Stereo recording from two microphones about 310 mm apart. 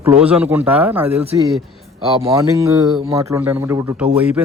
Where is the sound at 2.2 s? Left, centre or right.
Centre.